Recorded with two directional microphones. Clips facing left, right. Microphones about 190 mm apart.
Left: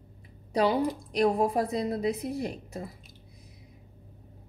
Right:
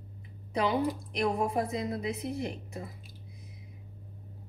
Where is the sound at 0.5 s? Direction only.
35° left (ahead or behind).